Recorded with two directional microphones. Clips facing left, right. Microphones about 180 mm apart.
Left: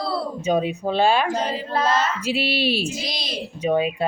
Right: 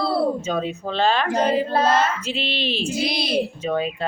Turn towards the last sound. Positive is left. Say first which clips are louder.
# right 7 dB
turn(degrees=-60)  # may be behind; listen again after turning